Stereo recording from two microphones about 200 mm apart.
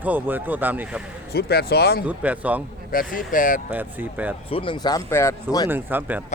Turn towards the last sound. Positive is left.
turn(degrees=-10)  # may be behind; listen again after turning